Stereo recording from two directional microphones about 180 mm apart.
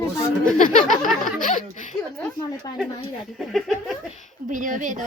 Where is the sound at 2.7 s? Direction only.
20° left (ahead or behind).